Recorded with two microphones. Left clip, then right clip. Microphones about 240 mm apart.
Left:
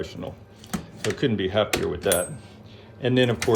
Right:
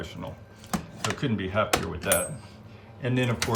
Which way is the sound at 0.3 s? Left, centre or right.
Centre.